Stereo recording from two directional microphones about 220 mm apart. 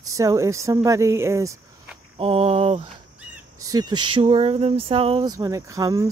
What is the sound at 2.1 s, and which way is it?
Speech, 25° right (ahead or behind).